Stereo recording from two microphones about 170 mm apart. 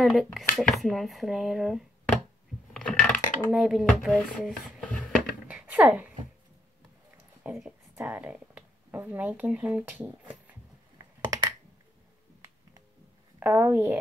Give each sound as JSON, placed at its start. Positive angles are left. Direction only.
{"t": 0.0, "sound": "speech", "side_deg": 0}
{"t": 2.7, "sound": "coin", "side_deg": 5}
{"t": 3.5, "sound": "speech", "side_deg": -5}
{"t": 5.5, "sound": "a sound", "side_deg": -10}
{"t": 7.4, "sound": "speech", "side_deg": -5}
{"t": 11.1, "sound": "computer keyboard", "side_deg": -20}
{"t": 13.4, "sound": "speech", "side_deg": -10}